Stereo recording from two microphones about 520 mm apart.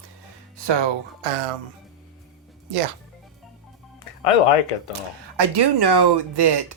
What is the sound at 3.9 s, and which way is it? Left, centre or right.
Music, left.